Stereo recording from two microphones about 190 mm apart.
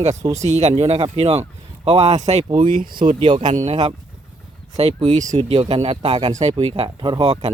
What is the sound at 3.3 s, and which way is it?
Speech, 40° right (ahead or behind).